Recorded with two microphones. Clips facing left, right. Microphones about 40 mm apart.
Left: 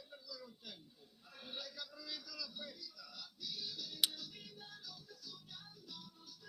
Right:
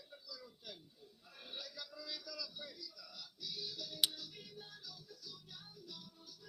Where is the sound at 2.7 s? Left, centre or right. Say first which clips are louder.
Even; left.